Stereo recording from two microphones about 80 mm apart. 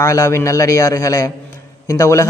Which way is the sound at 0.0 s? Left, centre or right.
Left.